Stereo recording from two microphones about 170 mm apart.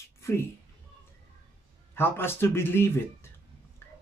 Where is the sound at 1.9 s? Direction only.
15° left (ahead or behind).